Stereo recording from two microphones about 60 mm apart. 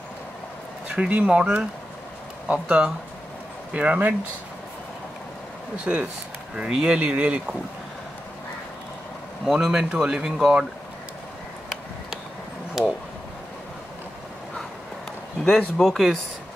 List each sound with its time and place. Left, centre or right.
0.8 s speech: right
5.9 s speech: right
9.4 s speech: centre
12.8 s speech: centre
15.4 s speech: centre